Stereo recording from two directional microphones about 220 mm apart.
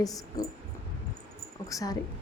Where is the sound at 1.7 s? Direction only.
15° left (ahead or behind).